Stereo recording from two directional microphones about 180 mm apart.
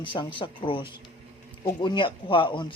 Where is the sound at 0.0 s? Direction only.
25° left (ahead or behind).